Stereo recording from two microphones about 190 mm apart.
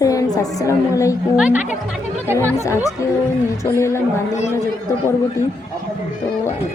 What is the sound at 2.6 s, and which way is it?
Speech, 15° left (ahead or behind).